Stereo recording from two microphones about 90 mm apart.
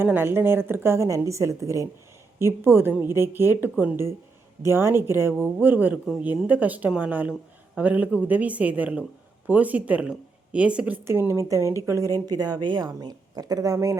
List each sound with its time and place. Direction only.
0.0 s a woman's voice: 25° right (ahead or behind)
4.6 s a woman's voice: 30° right (ahead or behind)
11.0 s speech: 30° right (ahead or behind)